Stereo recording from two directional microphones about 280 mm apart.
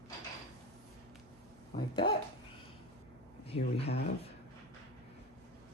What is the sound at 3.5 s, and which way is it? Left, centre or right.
Speech, left.